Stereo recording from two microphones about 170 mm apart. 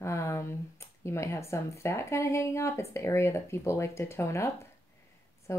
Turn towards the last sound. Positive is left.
turn(degrees=15)  # may be behind; listen again after turning